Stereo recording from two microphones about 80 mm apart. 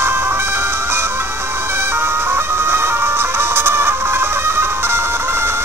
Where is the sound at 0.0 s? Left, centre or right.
Right.